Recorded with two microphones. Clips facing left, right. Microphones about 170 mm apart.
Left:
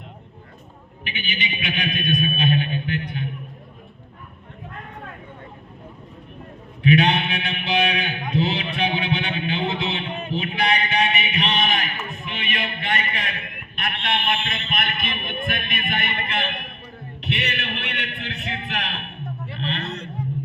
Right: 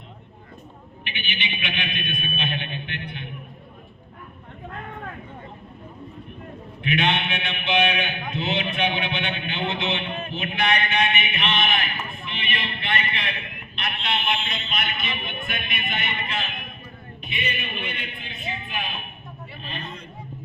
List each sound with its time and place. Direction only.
1.0 s a man's voice: 40° left (ahead or behind)
6.8 s a man's voice: 35° left (ahead or behind); by 16.7 s 65° left (ahead or behind)
17.2 s a sound: 75° left (ahead or behind)